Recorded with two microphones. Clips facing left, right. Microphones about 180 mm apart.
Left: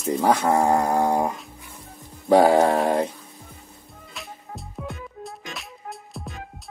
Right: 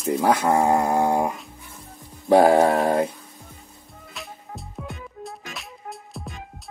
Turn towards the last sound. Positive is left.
turn(degrees=0)  # may be behind; listen again after turning